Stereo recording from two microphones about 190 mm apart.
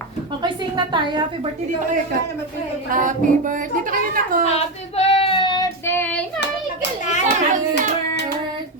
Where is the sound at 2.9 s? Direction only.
45° right (ahead or behind).